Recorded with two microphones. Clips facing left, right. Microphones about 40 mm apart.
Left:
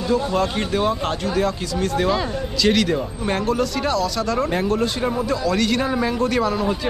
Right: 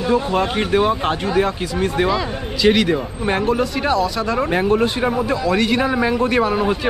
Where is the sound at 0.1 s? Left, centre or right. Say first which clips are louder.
Right 2 dB; right.